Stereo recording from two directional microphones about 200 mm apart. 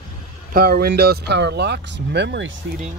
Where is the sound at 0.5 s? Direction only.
50° right (ahead or behind).